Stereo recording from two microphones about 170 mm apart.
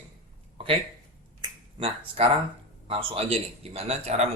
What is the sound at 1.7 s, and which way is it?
Speech, 35° right (ahead or behind).